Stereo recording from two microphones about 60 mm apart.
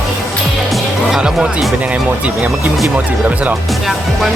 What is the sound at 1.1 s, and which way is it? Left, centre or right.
Speech, centre.